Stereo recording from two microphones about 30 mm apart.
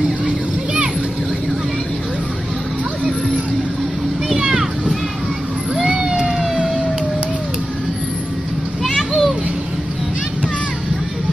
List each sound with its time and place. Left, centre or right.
4.4 s a sound: right
5.9 s cat: right
8.8 s children playing: centre